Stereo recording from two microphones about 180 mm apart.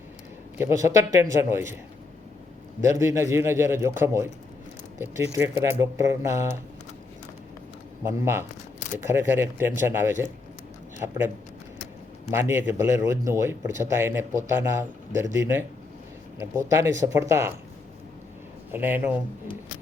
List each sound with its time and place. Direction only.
0.6 s a man's voice: 15° right (ahead or behind)
2.9 s a man's voice: 15° right (ahead or behind)
8.0 s a man's voice: 15° right (ahead or behind)
12.3 s a man's voice: 15° right (ahead or behind)
18.7 s a man's voice: 10° right (ahead or behind)